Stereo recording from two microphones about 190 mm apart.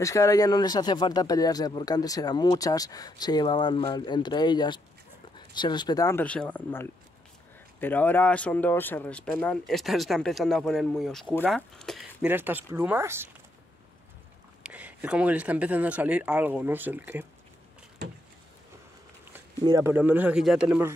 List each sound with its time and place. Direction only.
0.0 s speech: 15° left (ahead or behind)
12.3 s speech: 10° right (ahead or behind)
14.6 s speech: 5° right (ahead or behind)
19.6 s speech: 15° right (ahead or behind)